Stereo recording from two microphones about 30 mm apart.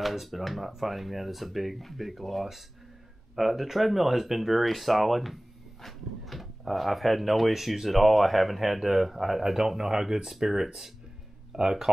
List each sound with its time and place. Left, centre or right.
0.0 s speech: centre; by 11.9 s right